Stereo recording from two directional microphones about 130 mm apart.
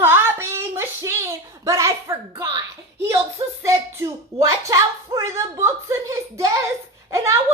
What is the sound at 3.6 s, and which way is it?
Speech, 25° right (ahead or behind).